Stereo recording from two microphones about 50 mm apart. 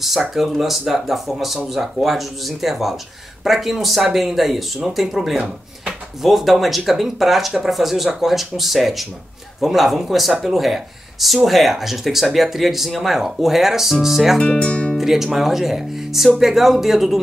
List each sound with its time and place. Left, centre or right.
0.0 s speech: centre
14.4 s speech: left
15.0 s speech: centre